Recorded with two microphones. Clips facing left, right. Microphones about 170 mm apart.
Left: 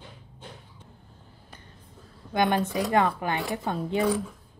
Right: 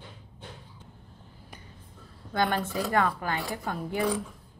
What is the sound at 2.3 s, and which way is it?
Speech, 20° left (ahead or behind).